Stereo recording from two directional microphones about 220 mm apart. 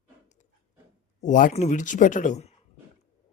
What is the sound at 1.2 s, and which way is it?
Speech, 35° left (ahead or behind).